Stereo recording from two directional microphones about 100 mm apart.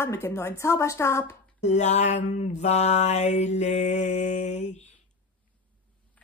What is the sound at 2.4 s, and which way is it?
Mantra, 90° left.